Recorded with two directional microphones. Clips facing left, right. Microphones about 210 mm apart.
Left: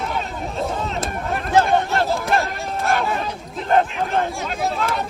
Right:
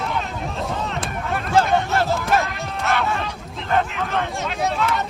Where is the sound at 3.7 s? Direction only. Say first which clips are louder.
Left 3 dB; 35° left (ahead or behind).